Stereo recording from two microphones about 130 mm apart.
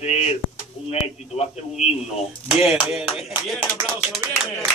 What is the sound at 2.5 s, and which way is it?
Speech, 5° right (ahead or behind).